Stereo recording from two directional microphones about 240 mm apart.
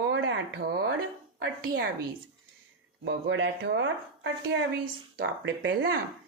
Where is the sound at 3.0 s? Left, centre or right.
Right.